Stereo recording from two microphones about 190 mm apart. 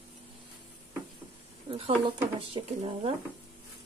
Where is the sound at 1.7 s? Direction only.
30° right (ahead or behind).